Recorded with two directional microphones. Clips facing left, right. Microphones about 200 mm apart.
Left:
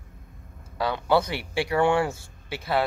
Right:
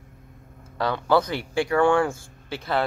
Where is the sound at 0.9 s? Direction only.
20° left (ahead or behind).